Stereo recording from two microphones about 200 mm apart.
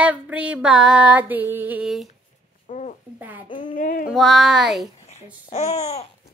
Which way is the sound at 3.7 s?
40° left (ahead or behind).